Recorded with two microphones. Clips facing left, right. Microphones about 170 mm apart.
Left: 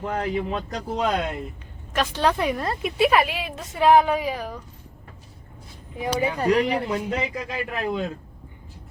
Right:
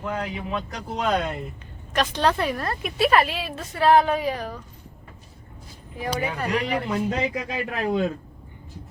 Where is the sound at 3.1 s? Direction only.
10° left (ahead or behind).